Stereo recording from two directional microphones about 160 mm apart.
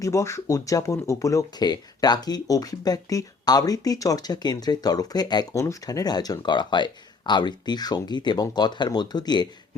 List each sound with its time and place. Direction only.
0.0 s speech: 20° left (ahead or behind)